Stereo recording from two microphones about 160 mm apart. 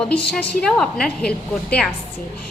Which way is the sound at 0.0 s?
5° left (ahead or behind).